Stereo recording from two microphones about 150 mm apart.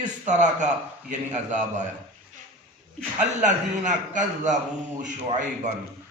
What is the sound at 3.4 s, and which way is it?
Mantra, 55° right (ahead or behind).